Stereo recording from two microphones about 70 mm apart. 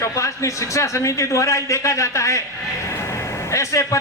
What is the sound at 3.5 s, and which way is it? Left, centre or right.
Speech, left.